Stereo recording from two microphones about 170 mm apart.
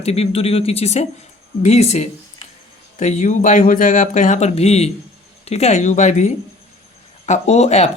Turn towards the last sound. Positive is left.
turn(degrees=40)  # may be behind; listen again after turning